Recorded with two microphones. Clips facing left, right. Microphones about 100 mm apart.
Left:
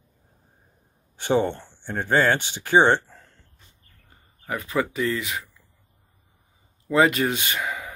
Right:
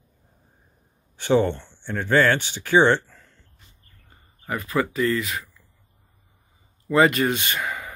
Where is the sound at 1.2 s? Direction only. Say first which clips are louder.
Right 2 dB; 15° left (ahead or behind).